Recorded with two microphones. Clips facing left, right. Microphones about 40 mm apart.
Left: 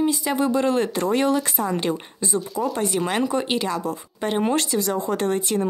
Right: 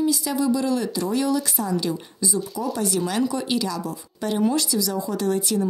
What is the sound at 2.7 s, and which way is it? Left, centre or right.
Speech, left.